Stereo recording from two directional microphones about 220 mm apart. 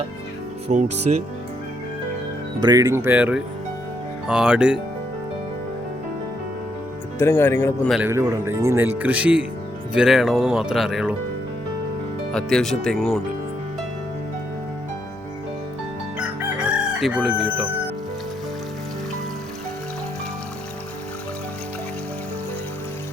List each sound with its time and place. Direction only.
0.7 s speech: 30° right (ahead or behind)
2.6 s speech: 15° right (ahead or behind)
7.2 s speech: 10° left (ahead or behind)
7.9 s speech: 10° right (ahead or behind)
12.3 s speech: 5° left (ahead or behind)
16.1 s crowing: 5° right (ahead or behind)